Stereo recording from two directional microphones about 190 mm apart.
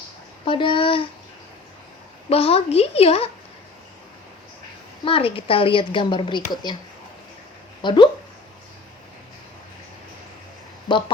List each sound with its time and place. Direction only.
0.4 s a woman's voice: 25° left (ahead or behind)
2.3 s a woman's voice: 30° left (ahead or behind)
5.0 s a woman's voice: 30° left (ahead or behind)
7.8 s speech: 25° left (ahead or behind)